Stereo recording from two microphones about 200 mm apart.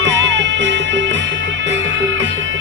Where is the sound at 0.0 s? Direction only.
65° right (ahead or behind).